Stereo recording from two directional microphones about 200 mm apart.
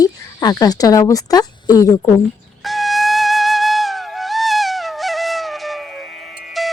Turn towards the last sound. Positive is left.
turn(degrees=0)  # may be behind; listen again after turning